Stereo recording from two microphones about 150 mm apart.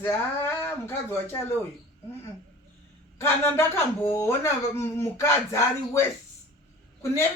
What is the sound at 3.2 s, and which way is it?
Speech, 15° left (ahead or behind).